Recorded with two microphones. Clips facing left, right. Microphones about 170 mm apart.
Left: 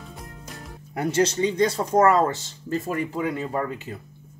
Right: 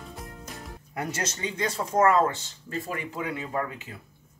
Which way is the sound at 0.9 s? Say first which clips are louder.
Left 10 dB; 30° left (ahead or behind).